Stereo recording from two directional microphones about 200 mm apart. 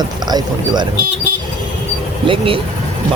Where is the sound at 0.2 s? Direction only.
20° right (ahead or behind).